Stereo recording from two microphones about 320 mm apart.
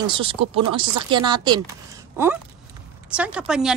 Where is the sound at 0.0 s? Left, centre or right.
Centre.